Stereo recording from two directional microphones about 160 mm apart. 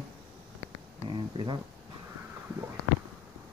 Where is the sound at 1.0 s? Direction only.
30° right (ahead or behind).